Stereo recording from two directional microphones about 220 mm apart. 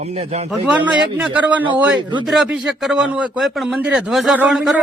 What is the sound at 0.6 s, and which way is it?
A man's voice, 5° right (ahead or behind).